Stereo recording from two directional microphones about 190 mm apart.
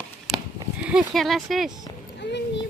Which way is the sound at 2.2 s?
65° left (ahead or behind).